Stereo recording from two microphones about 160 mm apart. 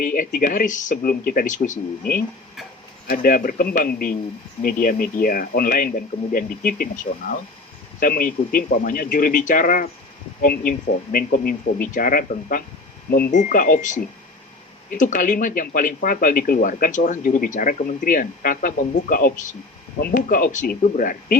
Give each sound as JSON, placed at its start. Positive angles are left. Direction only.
{"t": 0.0, "sound": "speech", "side_deg": 55}